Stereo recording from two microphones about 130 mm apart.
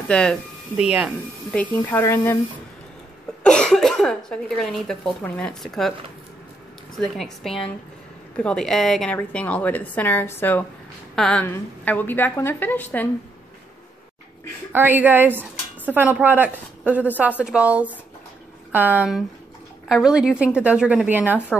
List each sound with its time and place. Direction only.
0.1 s a woman's voice: 5° left (ahead or behind)
0.7 s speech: 10° right (ahead or behind)
1.5 s a woman's voice: 10° left (ahead or behind)
3.4 s speech: 5° left (ahead or behind)
7.4 s a woman's voice: 5° left (ahead or behind)
14.7 s speech: 15° right (ahead or behind)